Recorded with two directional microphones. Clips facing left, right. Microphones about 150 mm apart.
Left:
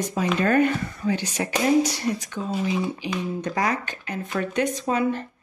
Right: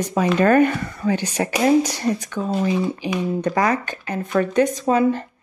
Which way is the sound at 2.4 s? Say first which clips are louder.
Right 5 dB; 90° right.